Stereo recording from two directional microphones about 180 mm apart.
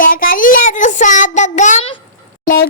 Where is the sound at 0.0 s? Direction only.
50° left (ahead or behind).